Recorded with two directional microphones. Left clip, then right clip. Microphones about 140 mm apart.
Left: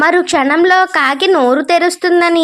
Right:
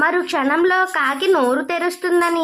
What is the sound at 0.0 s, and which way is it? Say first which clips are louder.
A woman's voice: left 7 dB; 30° left (ahead or behind).